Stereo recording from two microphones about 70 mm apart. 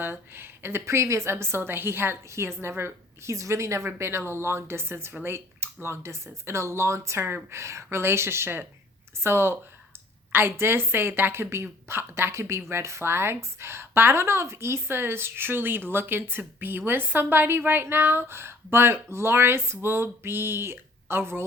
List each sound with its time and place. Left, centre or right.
0.0 s a woman's voice: right